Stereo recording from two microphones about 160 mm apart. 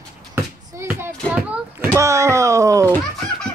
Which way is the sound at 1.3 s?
5° right (ahead or behind).